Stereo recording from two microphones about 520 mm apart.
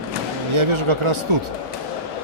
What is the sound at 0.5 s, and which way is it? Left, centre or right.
Speech, right.